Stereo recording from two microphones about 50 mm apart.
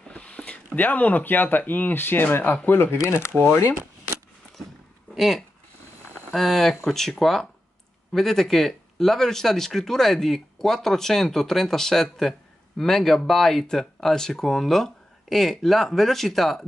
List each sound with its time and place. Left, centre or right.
0.1 s a sound: left
0.7 s speech: left
5.1 s speech: centre